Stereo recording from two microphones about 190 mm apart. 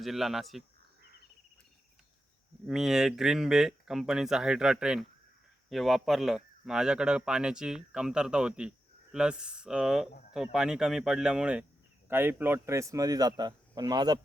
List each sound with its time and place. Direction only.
0.0 s speech: centre (ahead or behind)
2.6 s speech: centre (ahead or behind); by 14.2 s 20° right (ahead or behind)